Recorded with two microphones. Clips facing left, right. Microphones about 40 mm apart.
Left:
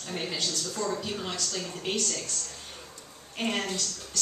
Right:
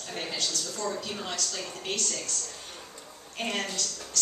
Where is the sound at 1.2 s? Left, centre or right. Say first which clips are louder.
Left 1 dB; centre.